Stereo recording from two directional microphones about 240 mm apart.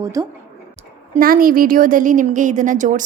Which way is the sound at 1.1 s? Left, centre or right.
Right.